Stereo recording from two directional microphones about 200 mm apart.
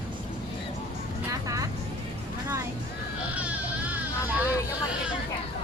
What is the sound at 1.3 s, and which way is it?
Vehicle, 15° right (ahead or behind).